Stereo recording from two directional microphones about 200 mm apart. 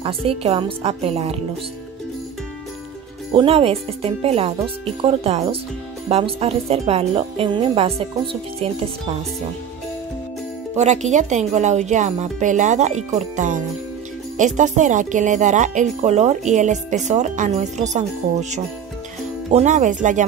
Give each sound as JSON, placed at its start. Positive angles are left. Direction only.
{"t": 0.0, "sound": "speech", "side_deg": -30}
{"t": 3.3, "sound": "speech", "side_deg": -30}
{"t": 10.8, "sound": "speech", "side_deg": -35}